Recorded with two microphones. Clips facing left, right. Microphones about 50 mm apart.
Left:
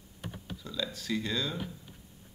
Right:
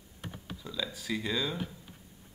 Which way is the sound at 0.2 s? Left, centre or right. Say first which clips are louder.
Left 1 dB; centre.